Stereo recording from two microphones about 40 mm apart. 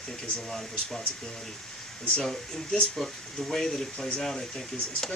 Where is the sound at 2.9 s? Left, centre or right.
Centre.